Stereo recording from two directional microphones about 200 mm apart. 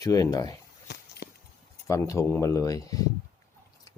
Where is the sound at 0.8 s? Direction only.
55° left (ahead or behind).